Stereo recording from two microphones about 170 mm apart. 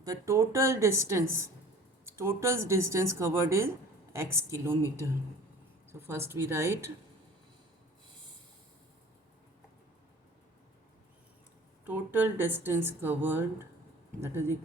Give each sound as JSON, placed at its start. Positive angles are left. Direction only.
{"t": 0.0, "sound": "speech", "side_deg": -20}
{"t": 11.9, "sound": "speech", "side_deg": -10}